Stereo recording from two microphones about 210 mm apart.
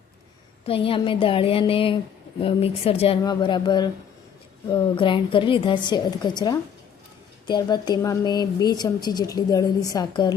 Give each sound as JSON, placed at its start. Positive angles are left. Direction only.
{"t": 0.6, "sound": "a woman's voice", "side_deg": 25}